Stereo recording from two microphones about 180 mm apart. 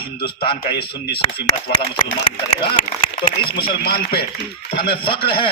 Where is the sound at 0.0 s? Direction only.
30° left (ahead or behind).